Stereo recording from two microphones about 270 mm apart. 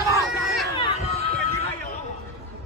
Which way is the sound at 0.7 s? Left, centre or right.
Centre.